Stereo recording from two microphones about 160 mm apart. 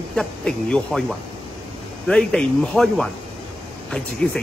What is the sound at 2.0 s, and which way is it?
Speech, 5° left (ahead or behind).